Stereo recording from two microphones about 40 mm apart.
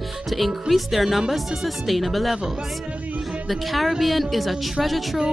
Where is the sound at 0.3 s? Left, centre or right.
Centre.